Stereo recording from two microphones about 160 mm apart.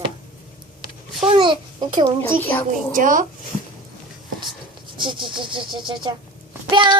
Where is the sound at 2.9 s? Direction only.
55° right (ahead or behind).